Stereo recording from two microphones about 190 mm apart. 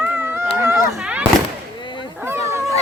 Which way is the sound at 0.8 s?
Centre (ahead or behind).